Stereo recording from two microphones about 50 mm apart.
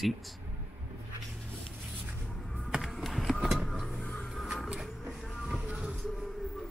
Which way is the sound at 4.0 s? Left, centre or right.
Left.